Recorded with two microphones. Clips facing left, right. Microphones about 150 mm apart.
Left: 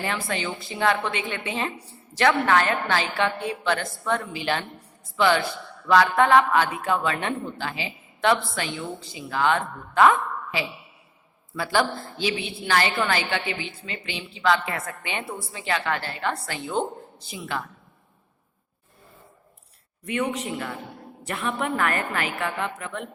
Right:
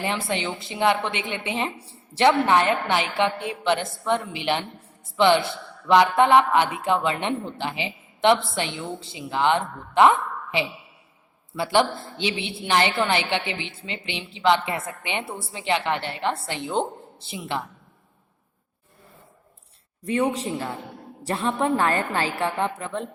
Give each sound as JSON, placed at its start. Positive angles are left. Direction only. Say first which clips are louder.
{"t": 0.0, "sound": "a woman's voice", "louder": "right 2 dB", "side_deg": -20}
{"t": 20.1, "sound": "a woman's voice", "louder": "right 3 dB", "side_deg": -30}